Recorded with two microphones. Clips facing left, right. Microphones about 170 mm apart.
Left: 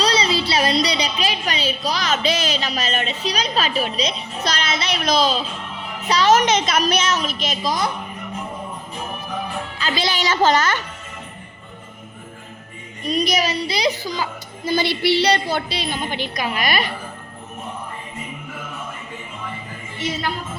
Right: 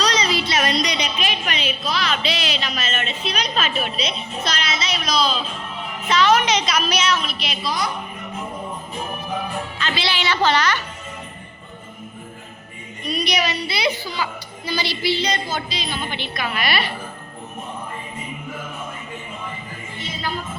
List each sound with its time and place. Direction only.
0.0 s a woman's voice: 30° left (ahead or behind)
9.7 s a woman's voice: 40° left (ahead or behind)
13.2 s a child's voice: 40° left (ahead or behind); by 16.0 s 60° left (ahead or behind)
16.0 s a woman's voice: 45° left (ahead or behind)
16.3 s a woman's voice: 15° left (ahead or behind)